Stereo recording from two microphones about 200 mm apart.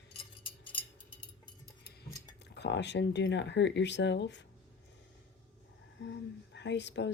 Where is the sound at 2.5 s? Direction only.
60° left (ahead or behind).